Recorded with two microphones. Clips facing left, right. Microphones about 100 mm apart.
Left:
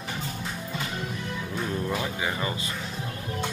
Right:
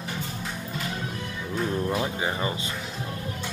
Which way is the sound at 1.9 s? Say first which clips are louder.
Right 2 dB; 25° right (ahead or behind).